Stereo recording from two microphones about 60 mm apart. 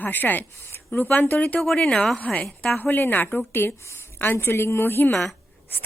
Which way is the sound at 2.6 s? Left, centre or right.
Centre.